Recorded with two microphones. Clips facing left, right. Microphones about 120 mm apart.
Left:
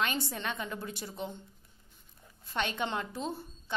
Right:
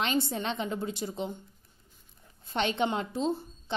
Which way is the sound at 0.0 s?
25° right (ahead or behind).